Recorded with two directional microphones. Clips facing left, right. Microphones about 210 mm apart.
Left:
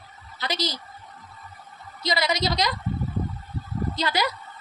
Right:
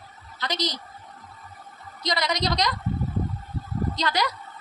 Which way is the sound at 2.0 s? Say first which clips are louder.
Left 1 dB; 5° left (ahead or behind).